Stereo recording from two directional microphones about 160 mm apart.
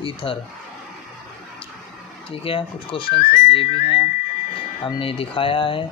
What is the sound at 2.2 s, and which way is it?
Speech, 35° left (ahead or behind).